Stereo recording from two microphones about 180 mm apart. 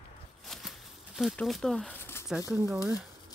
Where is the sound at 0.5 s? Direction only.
Centre (ahead or behind).